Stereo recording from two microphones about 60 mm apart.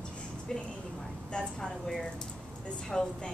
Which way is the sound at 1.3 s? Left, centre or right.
Centre.